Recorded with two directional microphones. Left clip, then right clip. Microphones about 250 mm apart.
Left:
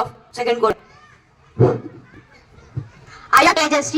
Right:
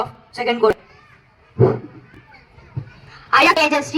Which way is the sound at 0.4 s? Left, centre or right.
Left.